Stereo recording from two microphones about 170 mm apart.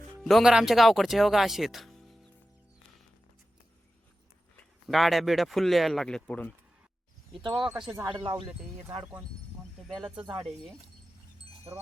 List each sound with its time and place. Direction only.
0.2 s speech: centre (ahead or behind)
4.5 s speech: centre (ahead or behind)
7.6 s speech: centre (ahead or behind)
7.9 s speech: 25° right (ahead or behind)
9.9 s speech: 5° right (ahead or behind)